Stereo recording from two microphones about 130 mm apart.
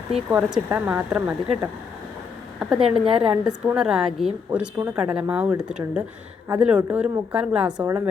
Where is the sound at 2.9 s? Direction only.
45° right (ahead or behind).